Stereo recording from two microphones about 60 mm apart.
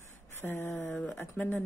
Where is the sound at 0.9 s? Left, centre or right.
Left.